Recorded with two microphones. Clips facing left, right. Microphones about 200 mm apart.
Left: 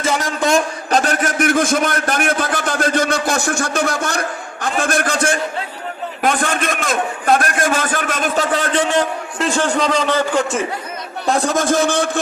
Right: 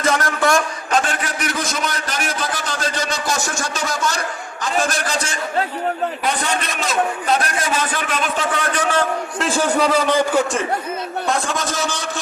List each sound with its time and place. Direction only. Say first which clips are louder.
0.0 s a sound: even; 10° left (ahead or behind)
0.9 s a sound: left 4 dB; 40° left (ahead or behind); by 4.2 s 55° left (ahead or behind)
4.6 s a man's voice: left 2 dB; 55° left (ahead or behind)
8.7 s a man's voice: left 3 dB; 25° left (ahead or behind)
9.4 s a man's voice: left 1 dB; 5° right (ahead or behind)
11.3 s a man's voice: left 8 dB; 40° left (ahead or behind); by 12.2 s 55° left (ahead or behind)